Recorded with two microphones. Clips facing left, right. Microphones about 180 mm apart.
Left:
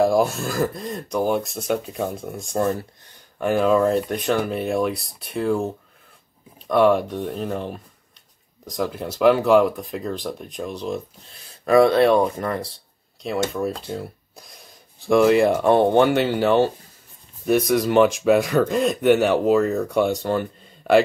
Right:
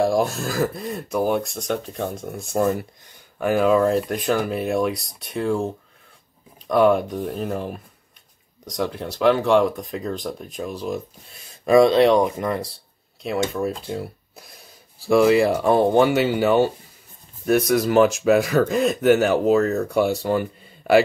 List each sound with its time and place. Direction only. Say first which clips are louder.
0.0 s speech: left 2 dB; centre (ahead or behind)
11.6 s speech: right 1 dB; 15° right (ahead or behind)
13.2 s speech: even; centre (ahead or behind)